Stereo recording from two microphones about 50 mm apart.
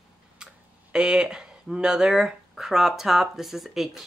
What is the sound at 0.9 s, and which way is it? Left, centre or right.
Speech, centre.